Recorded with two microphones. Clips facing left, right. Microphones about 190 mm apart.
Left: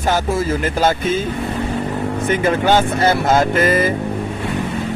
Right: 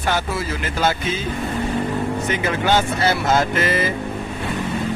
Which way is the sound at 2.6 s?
50° left (ahead or behind).